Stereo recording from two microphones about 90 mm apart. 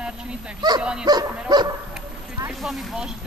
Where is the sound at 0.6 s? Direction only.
50° right (ahead or behind).